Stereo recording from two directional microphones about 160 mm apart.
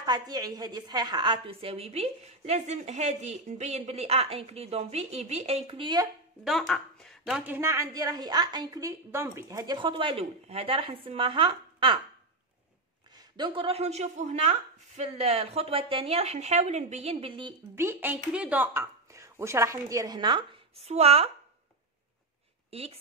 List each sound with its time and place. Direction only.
0.0 s a woman's voice: 25° right (ahead or behind)
6.4 s a woman's voice: centre (ahead or behind); by 12.0 s 30° right (ahead or behind)
13.1 s a woman's voice: 30° right (ahead or behind)
17.7 s a woman's voice: 15° right (ahead or behind); by 21.3 s 40° right (ahead or behind)
22.7 s speech: 40° right (ahead or behind)